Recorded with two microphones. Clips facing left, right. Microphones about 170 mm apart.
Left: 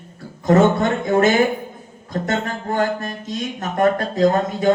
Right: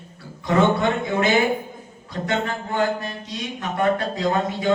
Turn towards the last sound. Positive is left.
turn(degrees=45)  # may be behind; listen again after turning